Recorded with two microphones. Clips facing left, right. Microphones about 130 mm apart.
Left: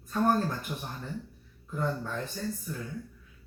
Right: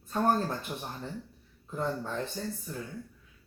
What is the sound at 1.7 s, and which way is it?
Speech, 25° right (ahead or behind).